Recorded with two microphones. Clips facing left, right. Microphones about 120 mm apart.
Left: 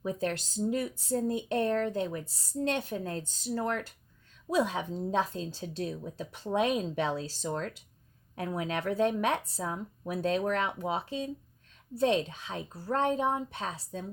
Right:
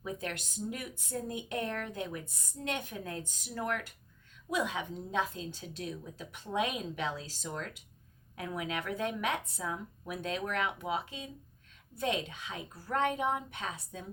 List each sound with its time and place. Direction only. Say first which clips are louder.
0.0 s speech: left 7 dB; 35° left (ahead or behind)